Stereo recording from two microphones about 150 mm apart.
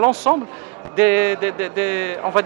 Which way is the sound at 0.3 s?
15° right (ahead or behind).